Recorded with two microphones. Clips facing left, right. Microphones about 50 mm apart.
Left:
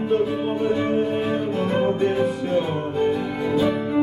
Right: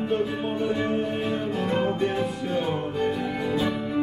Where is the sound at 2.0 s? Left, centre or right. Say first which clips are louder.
Left 5 dB; centre.